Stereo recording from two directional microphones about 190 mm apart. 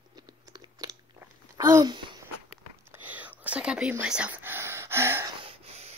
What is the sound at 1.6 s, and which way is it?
Speech, 20° right (ahead or behind).